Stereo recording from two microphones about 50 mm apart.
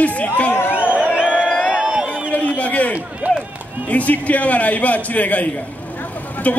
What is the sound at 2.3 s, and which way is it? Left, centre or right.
Speech, left.